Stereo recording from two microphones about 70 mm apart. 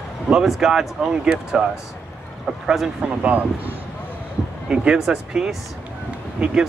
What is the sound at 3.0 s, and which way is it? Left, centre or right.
Speech, right.